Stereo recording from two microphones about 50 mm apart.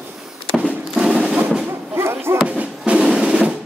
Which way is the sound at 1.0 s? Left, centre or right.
Centre.